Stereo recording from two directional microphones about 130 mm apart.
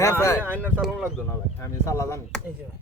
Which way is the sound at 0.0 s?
20° left (ahead or behind).